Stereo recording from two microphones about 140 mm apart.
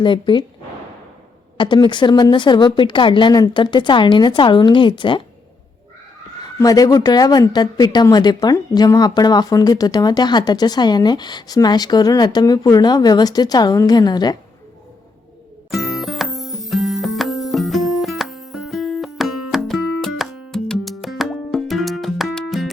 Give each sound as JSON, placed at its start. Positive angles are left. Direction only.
{"t": 0.0, "sound": "a woman's voice", "side_deg": 35}
{"t": 1.5, "sound": "a woman's voice", "side_deg": 35}
{"t": 6.4, "sound": "a woman's voice", "side_deg": 25}
{"t": 15.7, "sound": "music", "side_deg": 0}